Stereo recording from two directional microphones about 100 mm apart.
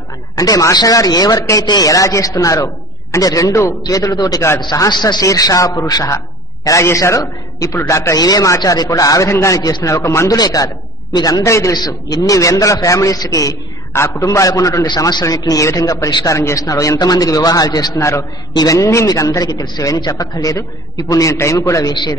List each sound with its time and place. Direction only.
0.4 s a man's voice: 35° left (ahead or behind)
5.2 s a man's voice: 35° left (ahead or behind)
9.9 s a man's voice: 30° left (ahead or behind)
10.3 s a man's voice: 40° left (ahead or behind)
11.7 s a man's voice: 40° left (ahead or behind)
17.9 s a man's voice: 30° left (ahead or behind)
18.5 s a man's voice: 40° left (ahead or behind)